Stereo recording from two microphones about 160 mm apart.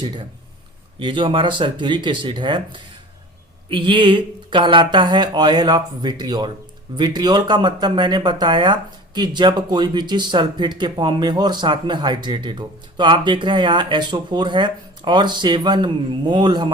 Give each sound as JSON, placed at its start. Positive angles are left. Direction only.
{"t": 0.9, "sound": "speech", "side_deg": -30}